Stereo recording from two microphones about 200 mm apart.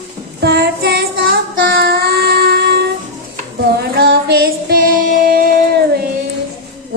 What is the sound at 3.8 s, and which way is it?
Female singing, 55° right (ahead or behind).